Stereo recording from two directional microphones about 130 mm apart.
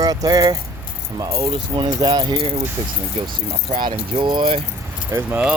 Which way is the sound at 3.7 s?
40° right (ahead or behind).